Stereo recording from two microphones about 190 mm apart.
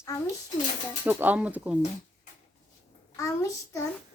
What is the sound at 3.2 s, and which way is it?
Speech, 15° left (ahead or behind).